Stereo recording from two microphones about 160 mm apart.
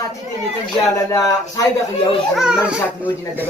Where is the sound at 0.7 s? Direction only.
20° left (ahead or behind).